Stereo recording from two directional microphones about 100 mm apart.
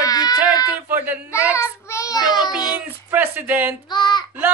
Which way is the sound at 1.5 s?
30° left (ahead or behind).